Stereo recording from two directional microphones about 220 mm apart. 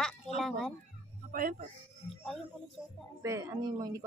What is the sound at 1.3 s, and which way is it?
Speech, 40° right (ahead or behind).